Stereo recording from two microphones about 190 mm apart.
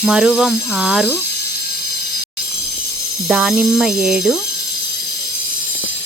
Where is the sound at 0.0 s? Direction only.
5° right (ahead or behind).